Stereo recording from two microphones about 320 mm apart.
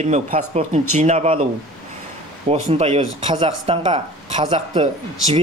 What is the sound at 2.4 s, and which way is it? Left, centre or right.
Speech, centre.